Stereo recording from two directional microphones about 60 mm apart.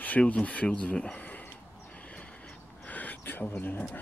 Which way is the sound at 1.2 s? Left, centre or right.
Left.